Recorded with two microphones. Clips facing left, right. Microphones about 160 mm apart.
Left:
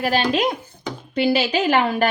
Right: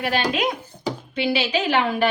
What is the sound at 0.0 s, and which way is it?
A woman's voice, 35° left (ahead or behind).